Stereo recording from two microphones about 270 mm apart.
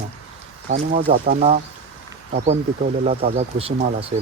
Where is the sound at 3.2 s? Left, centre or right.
Right.